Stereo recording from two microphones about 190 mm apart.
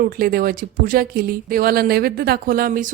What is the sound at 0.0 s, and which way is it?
Speech, 50° right (ahead or behind).